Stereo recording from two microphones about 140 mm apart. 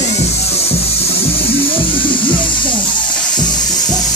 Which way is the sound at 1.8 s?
35° left (ahead or behind).